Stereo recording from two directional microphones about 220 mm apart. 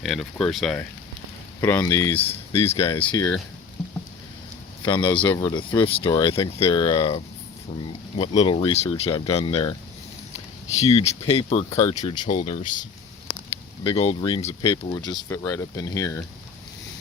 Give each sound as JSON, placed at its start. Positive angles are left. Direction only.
{"t": 0.0, "sound": "speech", "side_deg": 0}
{"t": 1.6, "sound": "speech", "side_deg": 15}
{"t": 4.9, "sound": "speech", "side_deg": 20}
{"t": 8.2, "sound": "speech", "side_deg": 25}
{"t": 10.8, "sound": "speech", "side_deg": 30}
{"t": 13.8, "sound": "speech", "side_deg": 25}